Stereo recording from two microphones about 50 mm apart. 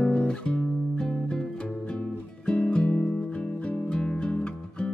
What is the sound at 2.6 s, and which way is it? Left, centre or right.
Music, left.